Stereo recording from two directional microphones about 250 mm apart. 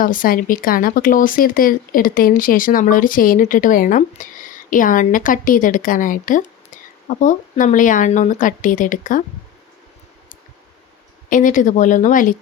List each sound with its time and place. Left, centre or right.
0.0 s speech: left
11.3 s speech: left